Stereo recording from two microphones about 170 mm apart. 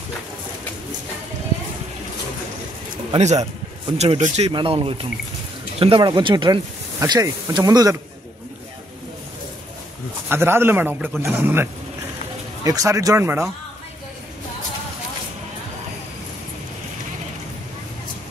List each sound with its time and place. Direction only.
3.1 s speech: 40° right (ahead or behind); by 8.0 s 20° right (ahead or behind)
10.3 s a man's voice: 15° right (ahead or behind)